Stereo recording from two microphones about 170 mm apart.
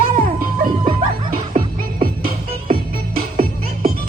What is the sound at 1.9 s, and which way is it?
Music, 45° right (ahead or behind).